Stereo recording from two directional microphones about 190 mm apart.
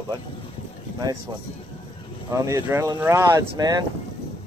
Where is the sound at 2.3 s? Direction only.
15° right (ahead or behind).